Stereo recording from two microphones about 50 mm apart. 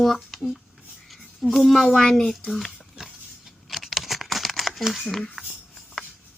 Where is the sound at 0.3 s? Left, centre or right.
Centre.